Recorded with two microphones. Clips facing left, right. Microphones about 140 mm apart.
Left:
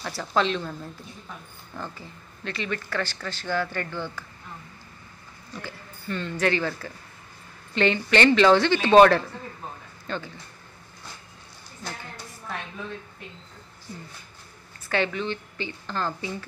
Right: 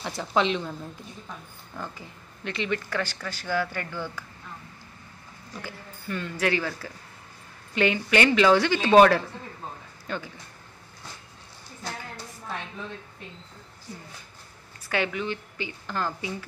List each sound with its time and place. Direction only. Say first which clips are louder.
0.0 s speech: even; 15° right (ahead or behind)
1.8 s speech: left 1 dB; 15° right (ahead or behind)
5.6 s speech: even; 10° right (ahead or behind)
14.9 s speech: left 2 dB; 10° right (ahead or behind)